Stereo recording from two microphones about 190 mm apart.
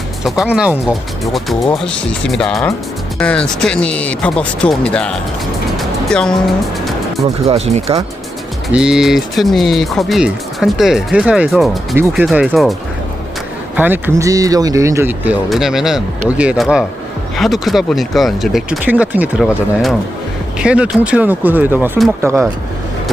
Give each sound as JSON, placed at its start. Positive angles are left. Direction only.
{"t": 0.3, "sound": "speech", "side_deg": -5}
{"t": 5.7, "sound": "music", "side_deg": 5}
{"t": 7.4, "sound": "speech", "side_deg": -35}
{"t": 8.7, "sound": "speech", "side_deg": -5}
{"t": 13.7, "sound": "speech", "side_deg": -10}